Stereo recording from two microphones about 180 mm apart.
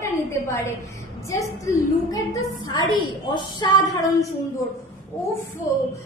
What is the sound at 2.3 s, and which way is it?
A woman's voice, 25° left (ahead or behind).